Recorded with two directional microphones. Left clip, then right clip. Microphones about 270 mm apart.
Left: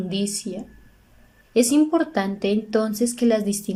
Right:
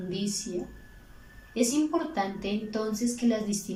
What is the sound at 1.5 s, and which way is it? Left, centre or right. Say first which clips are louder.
A woman's voice: left 9 dB; left.